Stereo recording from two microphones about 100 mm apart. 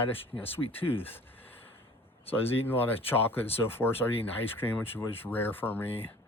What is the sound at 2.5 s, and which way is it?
Speech, 20° left (ahead or behind).